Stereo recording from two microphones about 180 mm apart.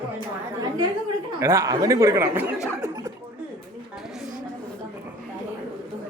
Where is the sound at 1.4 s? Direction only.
15° right (ahead or behind).